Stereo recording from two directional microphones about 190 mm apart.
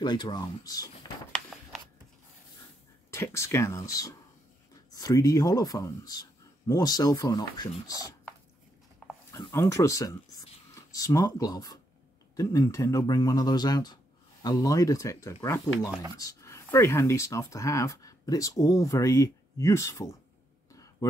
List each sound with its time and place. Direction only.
0.0 s speech: 20° left (ahead or behind)
3.1 s speech: 15° left (ahead or behind)
9.3 s speech: 15° left (ahead or behind)
20.7 s a sound: 15° left (ahead or behind)